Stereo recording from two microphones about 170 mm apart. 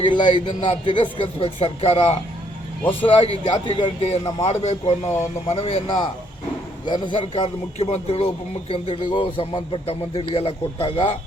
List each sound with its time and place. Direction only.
0.0 s a man's voice: 25° left (ahead or behind)